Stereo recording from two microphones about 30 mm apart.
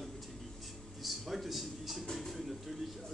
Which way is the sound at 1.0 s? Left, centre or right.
Centre.